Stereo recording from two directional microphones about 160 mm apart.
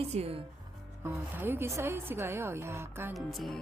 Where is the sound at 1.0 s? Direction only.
15° right (ahead or behind).